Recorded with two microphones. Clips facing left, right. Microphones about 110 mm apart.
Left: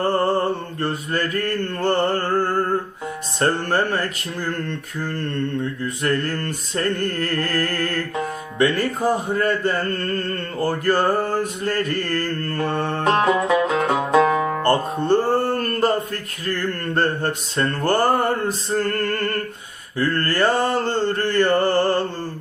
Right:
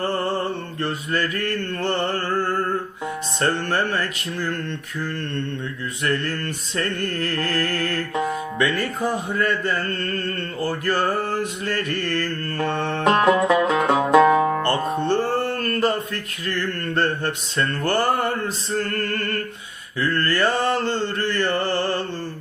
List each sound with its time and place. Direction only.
0.8 s music: 40° left (ahead or behind)
8.5 s music: 35° left (ahead or behind)
13.1 s music: centre (ahead or behind)
14.3 s music: 35° right (ahead or behind)
14.6 s music: 45° left (ahead or behind)